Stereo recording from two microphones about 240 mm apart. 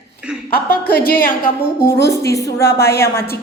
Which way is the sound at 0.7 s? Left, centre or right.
Left.